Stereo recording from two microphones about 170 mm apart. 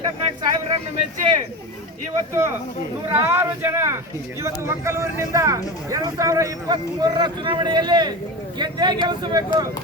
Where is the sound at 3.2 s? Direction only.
15° right (ahead or behind).